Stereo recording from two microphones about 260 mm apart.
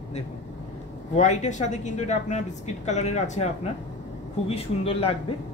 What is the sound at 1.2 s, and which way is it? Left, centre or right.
A man's voice, left.